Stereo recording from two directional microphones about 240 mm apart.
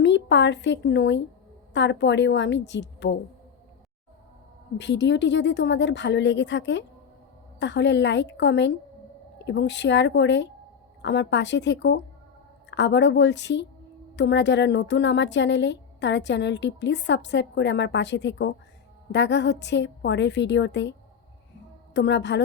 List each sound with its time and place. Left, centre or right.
0.0 s a woman's voice: left
4.8 s a woman's voice: left
21.9 s a woman's voice: left